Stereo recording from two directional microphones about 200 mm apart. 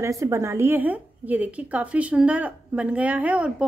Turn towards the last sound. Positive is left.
turn(degrees=-5)  # may be behind; listen again after turning